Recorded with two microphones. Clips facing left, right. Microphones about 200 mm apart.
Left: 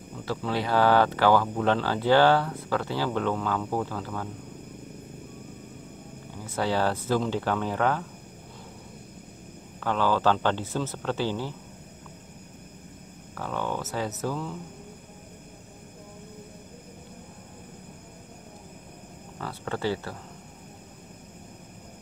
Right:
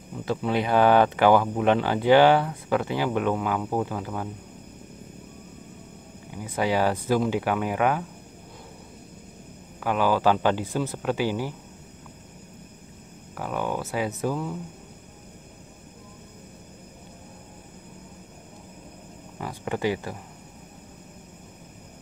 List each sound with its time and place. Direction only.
0.2 s speech: 20° right (ahead or behind)
6.3 s speech: 15° right (ahead or behind)
9.8 s speech: 10° right (ahead or behind)
13.3 s speech: 10° right (ahead or behind)
19.3 s speech: 15° right (ahead or behind)